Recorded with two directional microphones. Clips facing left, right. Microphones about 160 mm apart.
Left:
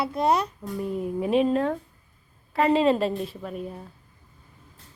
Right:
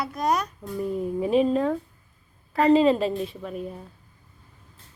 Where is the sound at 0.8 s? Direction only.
Centre (ahead or behind).